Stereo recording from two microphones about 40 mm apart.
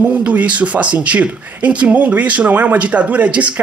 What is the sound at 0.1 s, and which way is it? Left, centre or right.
Speech, right.